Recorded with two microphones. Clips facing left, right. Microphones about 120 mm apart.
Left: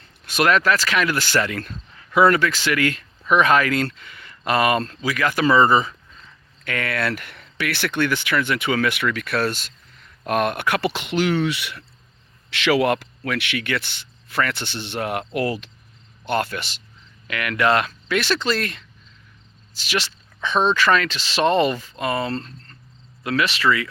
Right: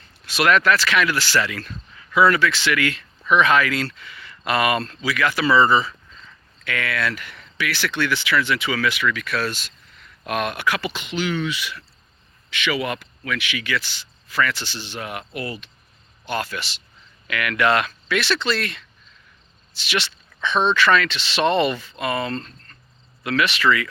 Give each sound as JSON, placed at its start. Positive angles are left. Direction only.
{"t": 0.3, "sound": "speech", "side_deg": 45}
{"t": 12.5, "sound": "speech", "side_deg": 85}
{"t": 16.2, "sound": "speech", "side_deg": 55}
{"t": 17.2, "sound": "speech", "side_deg": 30}